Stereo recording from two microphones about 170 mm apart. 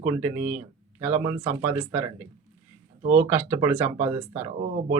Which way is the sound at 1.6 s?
10° right (ahead or behind).